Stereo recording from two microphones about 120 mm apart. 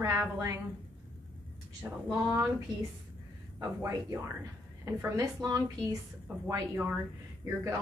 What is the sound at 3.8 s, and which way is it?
A woman's voice, 25° right (ahead or behind).